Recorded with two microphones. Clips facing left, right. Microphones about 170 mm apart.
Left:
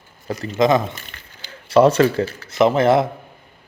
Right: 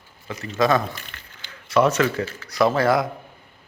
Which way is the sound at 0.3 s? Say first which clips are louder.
Left 6 dB; 35° left (ahead or behind).